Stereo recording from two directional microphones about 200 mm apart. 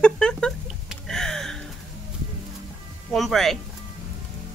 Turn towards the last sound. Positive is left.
turn(degrees=0)  # may be behind; listen again after turning